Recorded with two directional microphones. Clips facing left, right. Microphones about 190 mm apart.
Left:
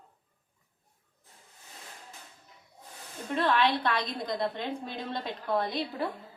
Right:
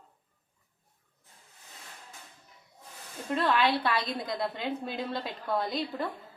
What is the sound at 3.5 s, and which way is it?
A woman's voice, 5° right (ahead or behind).